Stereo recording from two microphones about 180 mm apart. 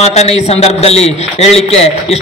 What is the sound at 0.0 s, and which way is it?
A man's voice, 35° left (ahead or behind).